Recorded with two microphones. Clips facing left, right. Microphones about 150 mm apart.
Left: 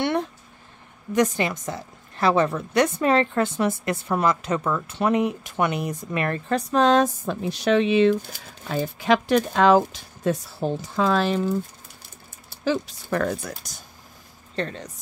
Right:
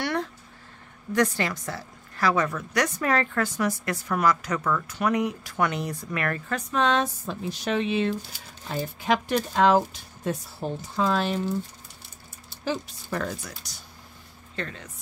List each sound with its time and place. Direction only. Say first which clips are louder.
0.0 s a sound: left 4 dB; 20° left (ahead or behind)
1.1 s a woman's voice: left 3 dB; 20° left (ahead or behind); by 7.1 s 40° left (ahead or behind)
7.2 s a woman's voice: left 7 dB; 75° left (ahead or behind); by 11.3 s 90° left
12.6 s speech: left 5 dB; 75° left (ahead or behind); by 13.8 s 50° left (ahead or behind)
14.5 s speech: left 6 dB; 35° left (ahead or behind)